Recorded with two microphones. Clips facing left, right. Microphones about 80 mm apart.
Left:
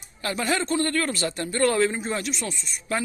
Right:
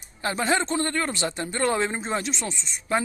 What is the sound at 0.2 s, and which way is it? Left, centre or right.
A man's voice, right.